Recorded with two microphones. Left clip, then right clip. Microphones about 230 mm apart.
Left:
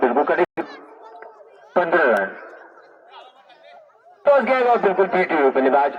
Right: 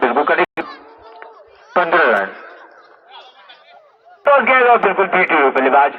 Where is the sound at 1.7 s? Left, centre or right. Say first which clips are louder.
Right 4 dB; centre.